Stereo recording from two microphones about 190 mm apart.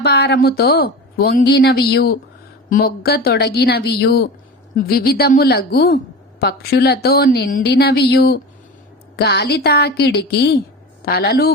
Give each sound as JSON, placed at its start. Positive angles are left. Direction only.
{"t": 0.0, "sound": "a woman's voice", "side_deg": 60}
{"t": 4.7, "sound": "a woman's voice", "side_deg": 50}